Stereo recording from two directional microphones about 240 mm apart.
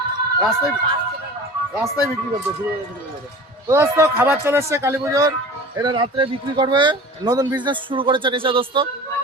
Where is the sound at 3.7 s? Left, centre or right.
Centre.